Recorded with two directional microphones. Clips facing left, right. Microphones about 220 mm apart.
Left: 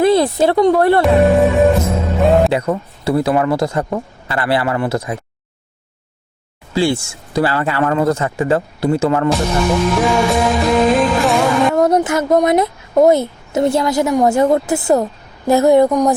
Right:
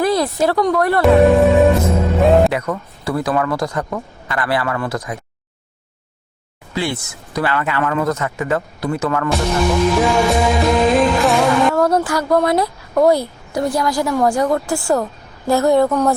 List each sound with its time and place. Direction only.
0.0 s speech: 25° left (ahead or behind)
1.0 s music: centre (ahead or behind)
2.5 s speech: 25° left (ahead or behind)
6.7 s speech: 30° left (ahead or behind)
9.9 s music: centre (ahead or behind)
11.7 s speech: 20° left (ahead or behind)